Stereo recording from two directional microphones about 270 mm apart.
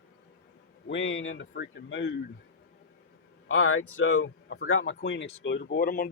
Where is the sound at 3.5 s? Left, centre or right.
Left.